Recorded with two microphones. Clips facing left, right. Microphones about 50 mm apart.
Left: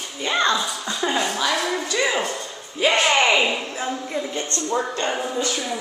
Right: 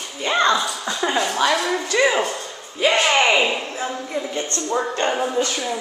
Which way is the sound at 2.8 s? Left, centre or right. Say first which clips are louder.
Right 1 dB; centre.